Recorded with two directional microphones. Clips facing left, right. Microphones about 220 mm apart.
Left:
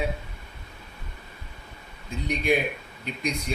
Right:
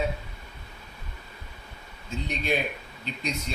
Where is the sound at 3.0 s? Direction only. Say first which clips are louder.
Left 3 dB; 10° left (ahead or behind).